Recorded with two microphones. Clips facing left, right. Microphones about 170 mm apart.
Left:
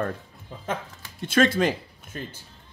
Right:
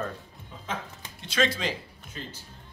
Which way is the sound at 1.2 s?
50° left (ahead or behind).